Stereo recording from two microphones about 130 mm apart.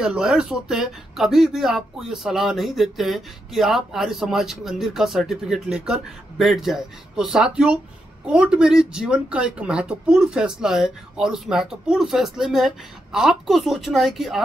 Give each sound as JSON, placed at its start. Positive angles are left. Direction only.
{"t": 0.0, "sound": "speech", "side_deg": -5}